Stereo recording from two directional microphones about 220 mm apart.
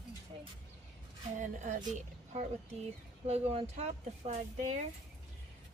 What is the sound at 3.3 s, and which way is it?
A woman's voice, 30° right (ahead or behind).